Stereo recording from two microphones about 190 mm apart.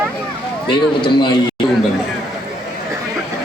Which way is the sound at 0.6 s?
25° left (ahead or behind).